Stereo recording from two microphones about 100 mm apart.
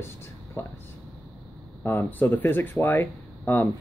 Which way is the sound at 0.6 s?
25° left (ahead or behind).